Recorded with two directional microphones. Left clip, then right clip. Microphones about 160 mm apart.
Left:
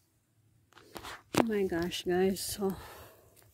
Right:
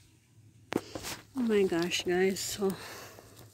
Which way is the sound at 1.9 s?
30° left (ahead or behind).